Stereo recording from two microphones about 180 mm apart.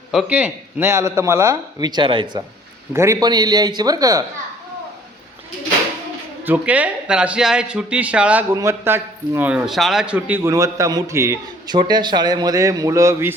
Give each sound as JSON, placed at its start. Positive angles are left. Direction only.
{"t": 0.1, "sound": "a man's voice", "side_deg": -5}
{"t": 2.9, "sound": "a man's voice", "side_deg": -15}
{"t": 6.4, "sound": "a man's voice", "side_deg": -10}